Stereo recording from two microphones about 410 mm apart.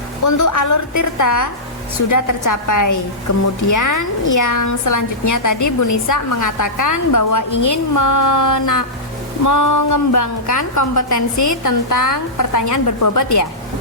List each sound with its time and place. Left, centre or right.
0.3 s a woman's voice: left